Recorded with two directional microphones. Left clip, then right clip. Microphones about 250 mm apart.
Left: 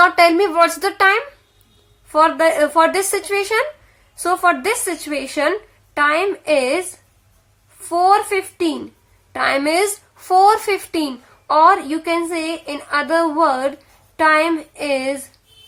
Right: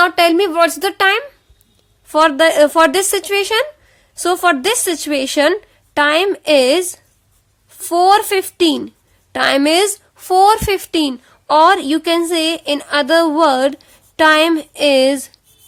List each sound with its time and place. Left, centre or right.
0.0 s a woman's voice: right